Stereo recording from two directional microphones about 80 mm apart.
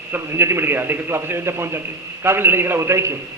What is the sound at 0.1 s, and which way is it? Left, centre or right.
A man's voice, right.